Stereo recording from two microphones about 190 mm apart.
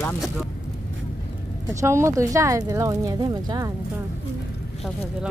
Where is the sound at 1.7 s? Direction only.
15° right (ahead or behind).